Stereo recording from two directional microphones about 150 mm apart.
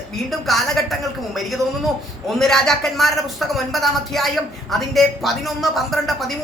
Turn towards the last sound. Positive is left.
turn(degrees=0)  # may be behind; listen again after turning